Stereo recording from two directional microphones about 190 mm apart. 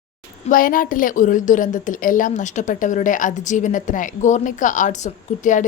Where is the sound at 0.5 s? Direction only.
45° left (ahead or behind).